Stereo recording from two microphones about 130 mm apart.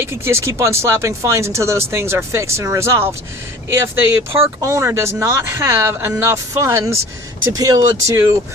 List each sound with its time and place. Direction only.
0.0 s speech: 20° right (ahead or behind)
4.3 s speech: 20° right (ahead or behind)